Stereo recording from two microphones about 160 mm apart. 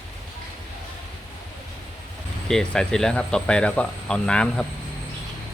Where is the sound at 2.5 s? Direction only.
5° left (ahead or behind).